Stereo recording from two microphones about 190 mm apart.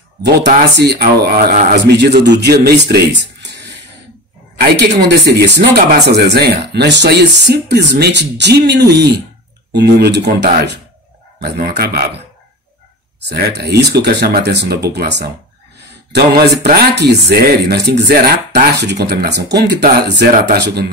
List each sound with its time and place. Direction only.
0.2 s speech: 65° right (ahead or behind)
13.3 s speech: 60° right (ahead or behind)
16.6 s speech: 60° right (ahead or behind)